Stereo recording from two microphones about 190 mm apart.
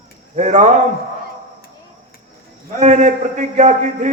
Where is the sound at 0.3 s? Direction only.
40° right (ahead or behind).